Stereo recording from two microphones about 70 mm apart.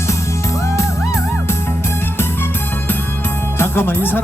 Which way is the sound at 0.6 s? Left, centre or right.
Left.